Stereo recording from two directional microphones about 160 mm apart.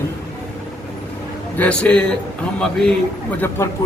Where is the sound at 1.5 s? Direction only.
10° left (ahead or behind).